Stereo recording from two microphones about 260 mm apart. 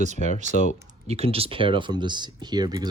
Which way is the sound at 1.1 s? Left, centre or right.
Right.